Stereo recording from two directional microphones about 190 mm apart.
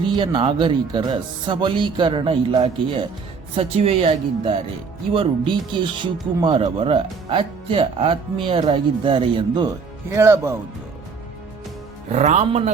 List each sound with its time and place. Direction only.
0.2 s speech: 25° right (ahead or behind)
10.1 s speech: 15° right (ahead or behind)
12.1 s speech: 35° right (ahead or behind)